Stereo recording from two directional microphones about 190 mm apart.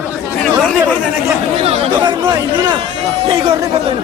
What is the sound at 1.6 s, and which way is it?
A man's voice, 30° right (ahead or behind).